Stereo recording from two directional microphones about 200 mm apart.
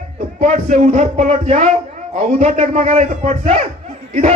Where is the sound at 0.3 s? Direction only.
35° right (ahead or behind).